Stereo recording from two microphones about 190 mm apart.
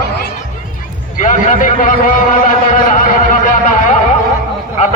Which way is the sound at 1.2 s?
40° left (ahead or behind).